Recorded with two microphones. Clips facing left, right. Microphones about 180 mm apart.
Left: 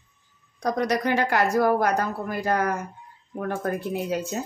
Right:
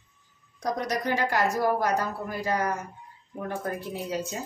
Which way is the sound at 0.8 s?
70° left (ahead or behind).